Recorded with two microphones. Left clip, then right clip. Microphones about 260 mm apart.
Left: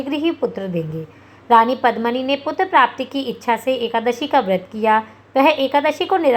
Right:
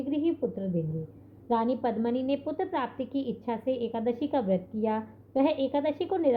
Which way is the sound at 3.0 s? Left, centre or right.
Left.